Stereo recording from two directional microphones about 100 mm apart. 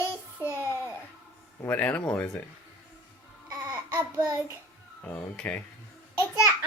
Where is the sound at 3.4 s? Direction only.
35° right (ahead or behind).